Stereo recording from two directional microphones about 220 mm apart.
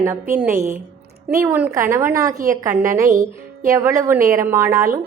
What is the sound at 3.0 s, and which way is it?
Music, 35° right (ahead or behind).